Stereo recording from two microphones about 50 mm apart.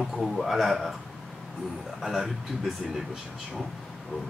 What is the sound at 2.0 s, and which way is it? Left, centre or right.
Speech, centre.